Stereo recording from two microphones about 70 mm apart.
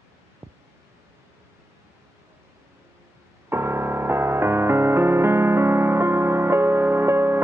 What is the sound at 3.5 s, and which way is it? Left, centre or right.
Music, right.